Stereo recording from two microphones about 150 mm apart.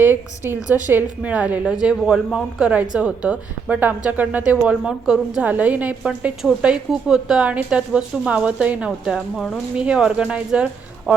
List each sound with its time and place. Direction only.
0.0 s a woman's voice: 15° right (ahead or behind)